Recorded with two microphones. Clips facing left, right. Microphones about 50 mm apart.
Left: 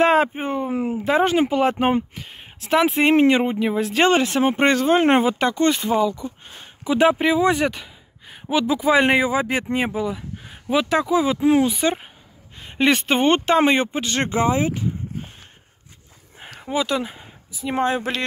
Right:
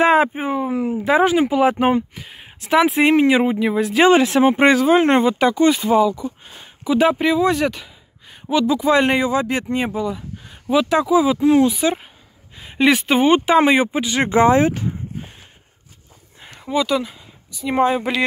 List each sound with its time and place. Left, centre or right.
0.0 s speech: centre
4.4 s speech: centre
5.0 s speech: centre
11.4 s speech: centre
11.7 s speech: centre
14.3 s speech: right
16.7 s speech: centre
17.0 s speech: left
17.7 s speech: centre